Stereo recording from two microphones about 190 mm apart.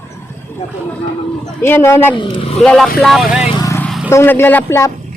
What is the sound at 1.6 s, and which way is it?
Speech, 15° left (ahead or behind).